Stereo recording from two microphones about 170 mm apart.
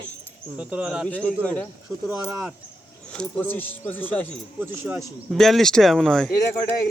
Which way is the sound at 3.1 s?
5° left (ahead or behind).